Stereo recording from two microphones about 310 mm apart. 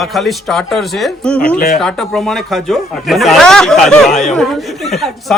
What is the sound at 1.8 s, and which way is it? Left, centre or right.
Speech, centre.